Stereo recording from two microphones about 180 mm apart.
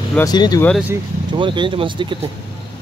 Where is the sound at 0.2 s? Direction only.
20° left (ahead or behind).